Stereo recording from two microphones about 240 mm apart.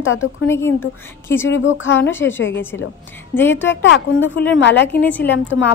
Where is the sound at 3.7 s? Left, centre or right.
Left.